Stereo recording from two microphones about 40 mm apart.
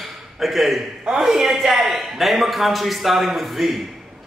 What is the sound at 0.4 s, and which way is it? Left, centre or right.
A man's voice, centre.